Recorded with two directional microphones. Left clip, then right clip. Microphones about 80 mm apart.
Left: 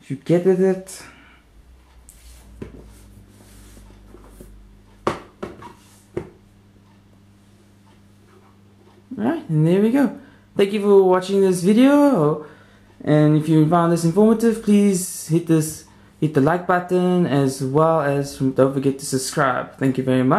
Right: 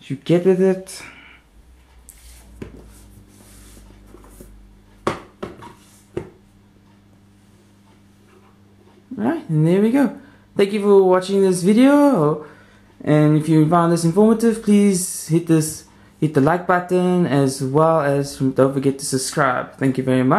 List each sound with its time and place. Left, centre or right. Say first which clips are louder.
0.1 s speech: right 1 dB; right
0.4 s speech: right 1 dB; centre
5.0 s a sound: even; centre
9.1 s speech: right 1 dB; centre
15.5 s speech: right 1 dB; centre
19.2 s speech: right 1 dB; centre